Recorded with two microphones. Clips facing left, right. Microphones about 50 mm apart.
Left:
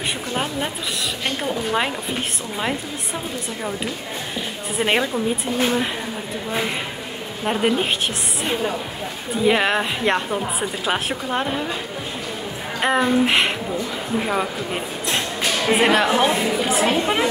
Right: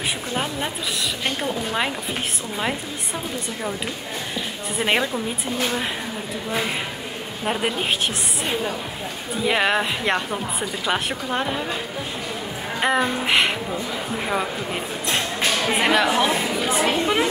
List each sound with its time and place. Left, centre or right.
0.3 s a woman's voice: centre
4.7 s a woman's voice: centre
7.4 s a woman's voice: centre
9.4 s a woman's voice: centre
12.8 s a woman's voice: centre
15.1 s music: centre
16.2 s a woman's voice: centre